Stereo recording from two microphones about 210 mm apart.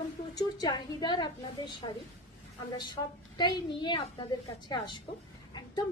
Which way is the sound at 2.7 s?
20° left (ahead or behind).